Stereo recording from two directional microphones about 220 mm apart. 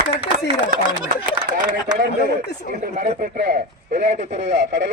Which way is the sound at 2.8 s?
35° right (ahead or behind).